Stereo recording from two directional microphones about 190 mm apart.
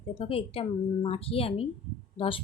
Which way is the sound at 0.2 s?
30° left (ahead or behind).